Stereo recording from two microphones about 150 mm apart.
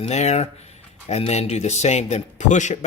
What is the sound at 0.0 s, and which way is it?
A man's voice, 50° left (ahead or behind).